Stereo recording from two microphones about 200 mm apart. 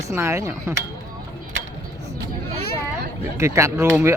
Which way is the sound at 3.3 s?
15° right (ahead or behind).